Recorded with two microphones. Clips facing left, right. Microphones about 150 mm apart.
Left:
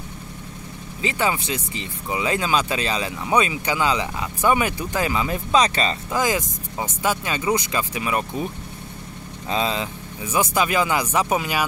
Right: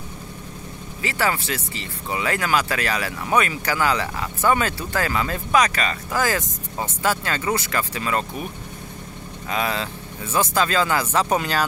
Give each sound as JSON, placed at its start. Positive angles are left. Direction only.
{"t": 1.0, "sound": "speech", "side_deg": 20}
{"t": 9.5, "sound": "speech", "side_deg": 20}